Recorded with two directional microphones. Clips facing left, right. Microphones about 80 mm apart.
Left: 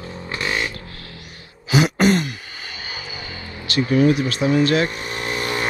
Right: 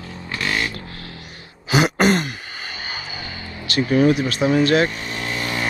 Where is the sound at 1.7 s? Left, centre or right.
Right.